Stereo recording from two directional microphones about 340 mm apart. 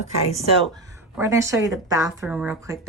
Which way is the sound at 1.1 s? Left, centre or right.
Centre.